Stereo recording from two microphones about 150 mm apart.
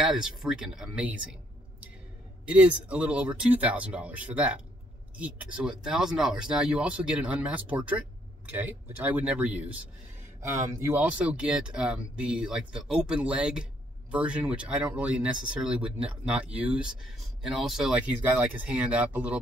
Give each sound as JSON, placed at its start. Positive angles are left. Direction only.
{"t": 0.0, "sound": "speech", "side_deg": -5}
{"t": 2.4, "sound": "speech", "side_deg": -10}